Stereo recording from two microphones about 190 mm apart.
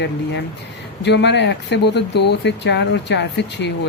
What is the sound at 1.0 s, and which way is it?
Speech, 65° left (ahead or behind).